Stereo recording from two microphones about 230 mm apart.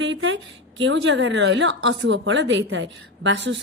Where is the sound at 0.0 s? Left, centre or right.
Right.